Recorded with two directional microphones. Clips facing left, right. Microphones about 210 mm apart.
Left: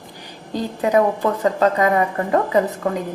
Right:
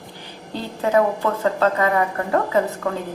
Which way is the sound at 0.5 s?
15° left (ahead or behind).